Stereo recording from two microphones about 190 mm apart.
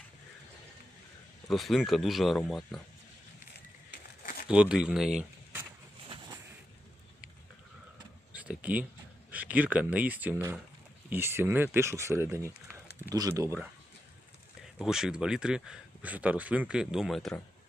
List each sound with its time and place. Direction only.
1.5 s speech: centre (ahead or behind)
3.9 s crumpling: 50° left (ahead or behind)
4.4 s speech: 5° right (ahead or behind)
8.3 s a sound: 5° right (ahead or behind)
9.3 s speech: 10° right (ahead or behind)
14.6 s speech: 5° right (ahead or behind)